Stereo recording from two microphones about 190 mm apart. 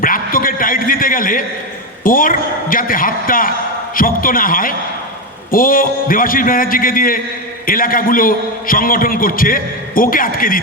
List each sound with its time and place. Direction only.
0.0 s a man's voice: 50° left (ahead or behind)